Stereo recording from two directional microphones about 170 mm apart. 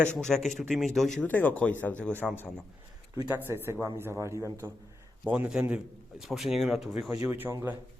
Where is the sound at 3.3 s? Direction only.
15° right (ahead or behind).